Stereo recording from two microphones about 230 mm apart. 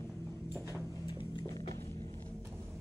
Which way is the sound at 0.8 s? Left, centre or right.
Centre.